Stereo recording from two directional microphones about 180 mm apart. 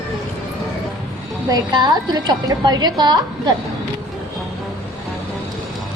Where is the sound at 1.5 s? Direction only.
25° right (ahead or behind).